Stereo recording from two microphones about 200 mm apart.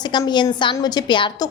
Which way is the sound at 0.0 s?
20° left (ahead or behind).